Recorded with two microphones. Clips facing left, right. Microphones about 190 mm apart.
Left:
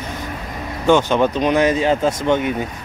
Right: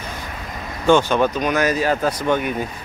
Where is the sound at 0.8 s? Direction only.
20° left (ahead or behind).